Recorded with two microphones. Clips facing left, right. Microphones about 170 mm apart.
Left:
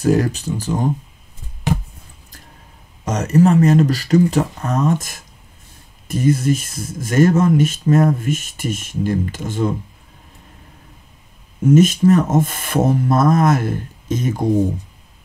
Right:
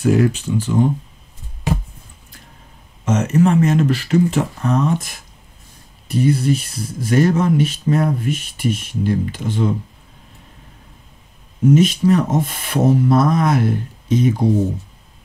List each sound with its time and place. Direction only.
0.0 s speech: 40° left (ahead or behind)
3.1 s speech: 40° left (ahead or behind)
11.7 s speech: 45° left (ahead or behind)